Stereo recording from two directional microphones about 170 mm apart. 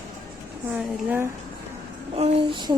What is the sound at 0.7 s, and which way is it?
Speech, 10° right (ahead or behind).